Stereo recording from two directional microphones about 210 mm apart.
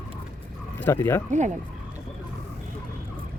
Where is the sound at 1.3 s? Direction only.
35° right (ahead or behind).